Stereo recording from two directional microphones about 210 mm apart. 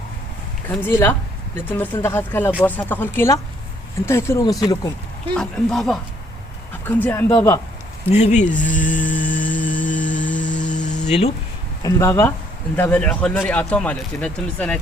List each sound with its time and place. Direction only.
0.7 s speech: 10° left (ahead or behind)
5.3 s speech: 5° left (ahead or behind)
8.1 s speech: 35° left (ahead or behind)
10.2 s music: 5° left (ahead or behind)
10.6 s a sound: 35° left (ahead or behind)
11.8 s speech: 15° left (ahead or behind)